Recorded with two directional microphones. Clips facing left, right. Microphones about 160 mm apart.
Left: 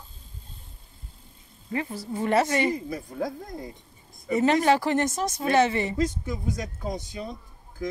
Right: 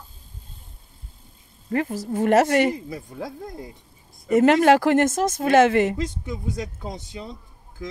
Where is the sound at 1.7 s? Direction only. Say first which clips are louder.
Right 6 dB; 45° right (ahead or behind).